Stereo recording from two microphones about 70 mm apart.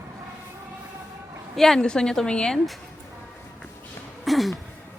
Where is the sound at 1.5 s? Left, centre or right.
Centre.